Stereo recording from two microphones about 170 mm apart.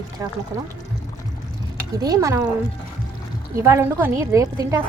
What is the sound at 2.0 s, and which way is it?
Speech, 20° right (ahead or behind).